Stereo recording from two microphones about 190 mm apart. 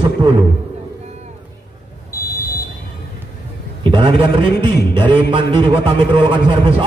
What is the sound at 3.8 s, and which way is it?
A man's voice, 25° right (ahead or behind).